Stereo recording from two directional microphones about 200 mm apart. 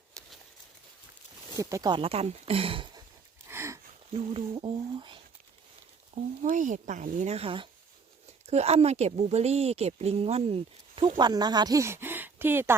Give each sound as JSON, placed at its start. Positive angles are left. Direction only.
{"t": 1.5, "sound": "speech", "side_deg": -15}
{"t": 3.5, "sound": "a sound", "side_deg": -15}
{"t": 4.1, "sound": "speech", "side_deg": -25}
{"t": 6.4, "sound": "a woman's voice", "side_deg": -40}